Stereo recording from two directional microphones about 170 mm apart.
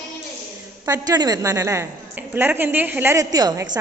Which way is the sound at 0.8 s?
20° right (ahead or behind).